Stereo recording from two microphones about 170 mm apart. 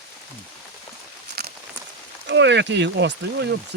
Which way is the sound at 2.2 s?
90° right.